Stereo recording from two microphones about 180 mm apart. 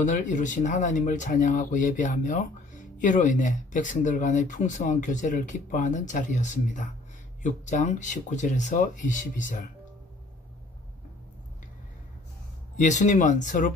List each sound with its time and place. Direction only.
0.0 s speech: 45° left (ahead or behind)
12.7 s speech: 40° left (ahead or behind)